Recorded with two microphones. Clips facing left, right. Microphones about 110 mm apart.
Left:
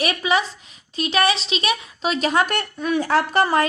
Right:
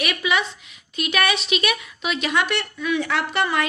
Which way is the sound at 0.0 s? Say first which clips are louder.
Left 2 dB; 35° left (ahead or behind).